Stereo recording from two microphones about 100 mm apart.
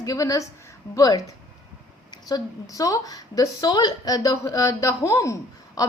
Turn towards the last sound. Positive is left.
turn(degrees=35)  # may be behind; listen again after turning